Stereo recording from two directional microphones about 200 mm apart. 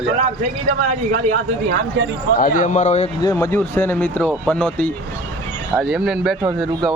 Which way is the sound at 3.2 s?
15° left (ahead or behind).